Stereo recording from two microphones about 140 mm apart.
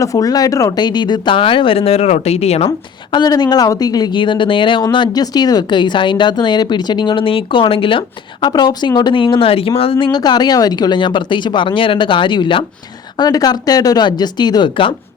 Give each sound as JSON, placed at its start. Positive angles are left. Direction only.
{"t": 0.0, "sound": "a woman's voice", "side_deg": 25}
{"t": 2.6, "sound": "a woman's voice", "side_deg": 30}